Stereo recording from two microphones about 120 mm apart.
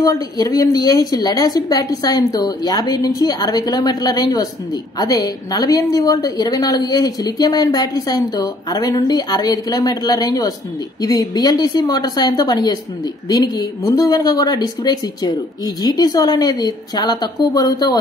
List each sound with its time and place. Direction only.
0.0 s a woman's voice: 30° left (ahead or behind)